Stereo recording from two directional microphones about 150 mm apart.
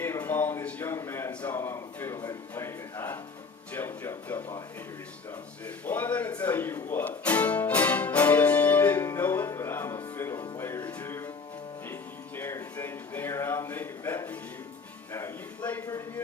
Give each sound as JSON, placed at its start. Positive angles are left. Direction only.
{"t": 0.0, "sound": "a man's voice", "side_deg": 15}
{"t": 5.6, "sound": "music", "side_deg": 10}
{"t": 12.4, "sound": "a sound", "side_deg": 15}
{"t": 15.1, "sound": "a man's voice", "side_deg": 15}